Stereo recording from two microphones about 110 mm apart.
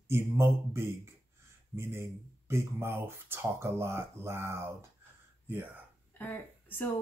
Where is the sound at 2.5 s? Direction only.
25° right (ahead or behind).